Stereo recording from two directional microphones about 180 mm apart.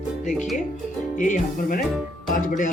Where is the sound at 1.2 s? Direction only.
45° left (ahead or behind).